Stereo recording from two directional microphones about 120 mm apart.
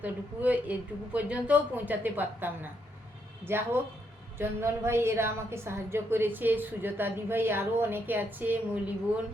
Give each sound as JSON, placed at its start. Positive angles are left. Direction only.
{"t": 0.0, "sound": "a woman's voice", "side_deg": -15}